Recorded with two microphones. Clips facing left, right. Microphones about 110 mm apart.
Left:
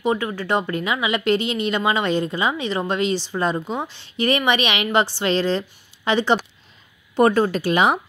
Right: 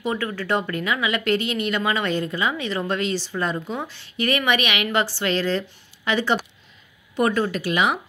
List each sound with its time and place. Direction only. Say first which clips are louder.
0.0 s speech: left 4 dB; 25° left (ahead or behind)
7.2 s speech: left 5 dB; 35° left (ahead or behind)